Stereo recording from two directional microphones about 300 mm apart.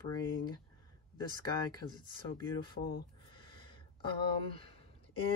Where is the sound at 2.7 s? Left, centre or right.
Left.